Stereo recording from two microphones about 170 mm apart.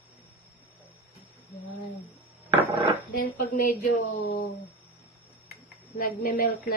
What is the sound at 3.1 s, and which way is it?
Speech, 55° left (ahead or behind).